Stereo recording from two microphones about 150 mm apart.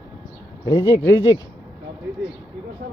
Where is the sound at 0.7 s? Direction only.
25° left (ahead or behind).